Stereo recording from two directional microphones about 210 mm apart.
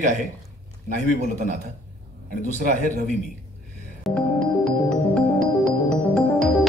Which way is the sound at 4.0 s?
5° left (ahead or behind).